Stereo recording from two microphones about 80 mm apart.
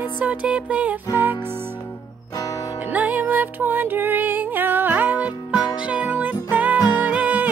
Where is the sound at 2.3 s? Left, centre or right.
Left.